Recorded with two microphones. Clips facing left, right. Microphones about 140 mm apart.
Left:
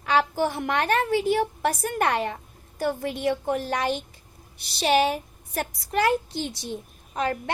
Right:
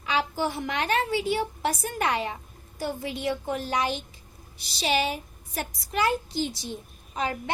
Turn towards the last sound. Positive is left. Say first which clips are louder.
# left 3 dB
turn(degrees=55)  # may be behind; listen again after turning